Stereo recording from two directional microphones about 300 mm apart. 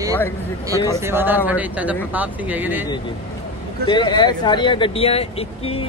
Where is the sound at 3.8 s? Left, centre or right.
Centre.